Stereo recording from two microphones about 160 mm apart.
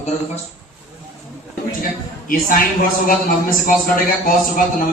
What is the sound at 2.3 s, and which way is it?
A man's voice, 60° left (ahead or behind).